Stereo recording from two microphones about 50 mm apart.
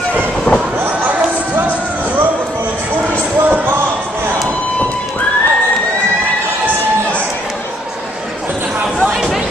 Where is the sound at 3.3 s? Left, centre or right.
Right.